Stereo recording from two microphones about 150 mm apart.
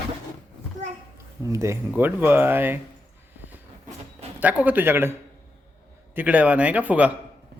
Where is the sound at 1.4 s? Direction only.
20° right (ahead or behind).